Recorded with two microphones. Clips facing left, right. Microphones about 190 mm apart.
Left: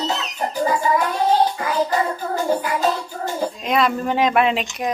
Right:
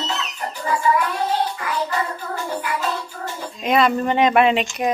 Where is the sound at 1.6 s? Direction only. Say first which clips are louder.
Left 4 dB; 40° left (ahead or behind).